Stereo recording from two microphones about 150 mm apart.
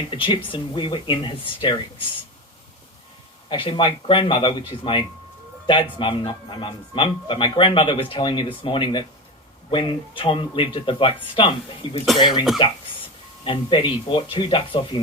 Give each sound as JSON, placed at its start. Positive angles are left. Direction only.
{"t": 0.2, "sound": "a man's voice", "side_deg": 35}
{"t": 3.5, "sound": "a man's voice", "side_deg": 35}